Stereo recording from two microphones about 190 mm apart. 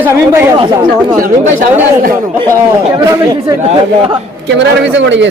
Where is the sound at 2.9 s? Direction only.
20° right (ahead or behind).